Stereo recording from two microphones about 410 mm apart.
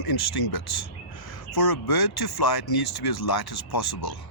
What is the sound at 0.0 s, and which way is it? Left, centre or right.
Speech, left.